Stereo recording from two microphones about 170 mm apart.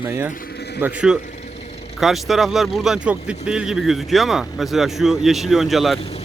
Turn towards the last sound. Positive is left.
turn(degrees=0)  # may be behind; listen again after turning